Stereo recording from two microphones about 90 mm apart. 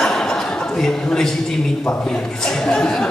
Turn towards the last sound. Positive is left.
turn(degrees=5)  # may be behind; listen again after turning